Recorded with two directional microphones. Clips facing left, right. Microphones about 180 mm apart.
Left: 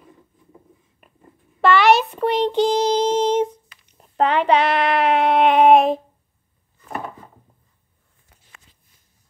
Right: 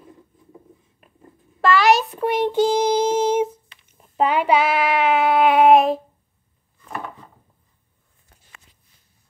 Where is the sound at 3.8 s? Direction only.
Centre (ahead or behind).